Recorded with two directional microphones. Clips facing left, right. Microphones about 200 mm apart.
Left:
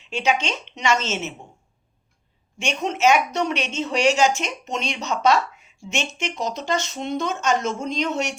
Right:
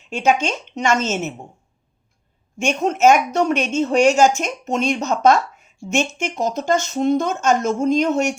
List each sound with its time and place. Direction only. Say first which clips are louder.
0.0 s speech: right 5 dB; 50° right (ahead or behind)
2.6 s speech: right 6 dB; 50° right (ahead or behind)